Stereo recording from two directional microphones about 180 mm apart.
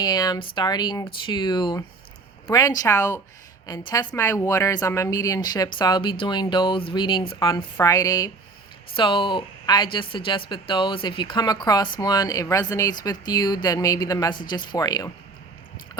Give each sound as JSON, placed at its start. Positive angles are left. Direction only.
{"t": 0.0, "sound": "speech", "side_deg": 25}